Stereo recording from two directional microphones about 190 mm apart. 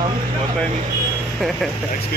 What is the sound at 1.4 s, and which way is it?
Speech, centre (ahead or behind).